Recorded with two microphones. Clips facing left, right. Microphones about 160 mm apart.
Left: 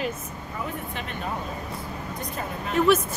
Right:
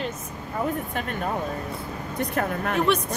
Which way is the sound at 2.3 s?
65° right (ahead or behind).